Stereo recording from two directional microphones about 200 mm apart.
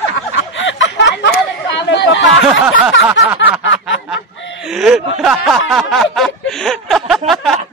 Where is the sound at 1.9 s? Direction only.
65° left (ahead or behind).